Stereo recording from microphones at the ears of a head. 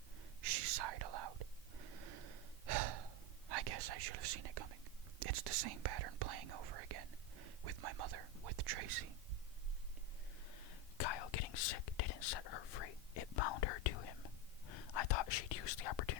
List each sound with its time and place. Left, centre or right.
0.4 s whispering: right
10.5 s whispering: left